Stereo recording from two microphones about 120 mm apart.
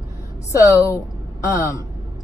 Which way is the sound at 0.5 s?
25° left (ahead or behind).